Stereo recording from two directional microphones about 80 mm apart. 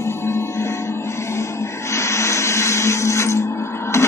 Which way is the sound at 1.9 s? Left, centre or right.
Left.